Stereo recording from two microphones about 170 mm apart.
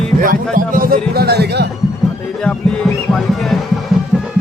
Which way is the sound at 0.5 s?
55° right (ahead or behind).